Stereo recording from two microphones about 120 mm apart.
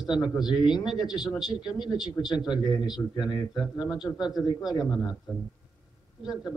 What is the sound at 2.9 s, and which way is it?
Speech, 35° left (ahead or behind).